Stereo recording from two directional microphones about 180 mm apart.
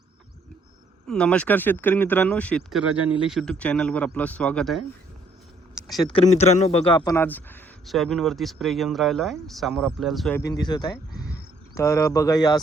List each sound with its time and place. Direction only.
1.0 s speech: 5° left (ahead or behind)
5.9 s speech: centre (ahead or behind)
6.1 s a man's voice: 35° left (ahead or behind); by 10.3 s centre (ahead or behind)
10.3 s a man's voice: 20° left (ahead or behind)
10.9 s a sound: 60° left (ahead or behind)
11.7 s speech: 15° left (ahead or behind)